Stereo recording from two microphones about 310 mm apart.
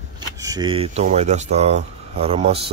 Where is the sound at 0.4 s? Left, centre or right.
Centre.